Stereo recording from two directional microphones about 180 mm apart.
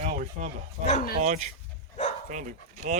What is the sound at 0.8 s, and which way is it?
Speech, 40° left (ahead or behind).